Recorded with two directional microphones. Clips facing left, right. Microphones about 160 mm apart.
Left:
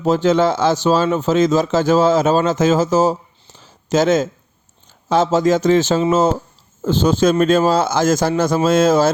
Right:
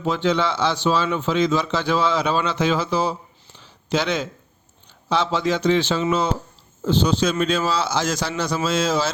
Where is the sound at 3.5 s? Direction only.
40° left (ahead or behind).